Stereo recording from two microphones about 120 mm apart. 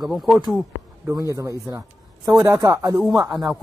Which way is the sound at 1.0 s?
25° right (ahead or behind).